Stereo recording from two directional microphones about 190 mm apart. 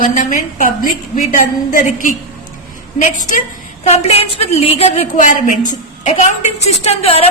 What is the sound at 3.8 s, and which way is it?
A woman's voice, 35° left (ahead or behind).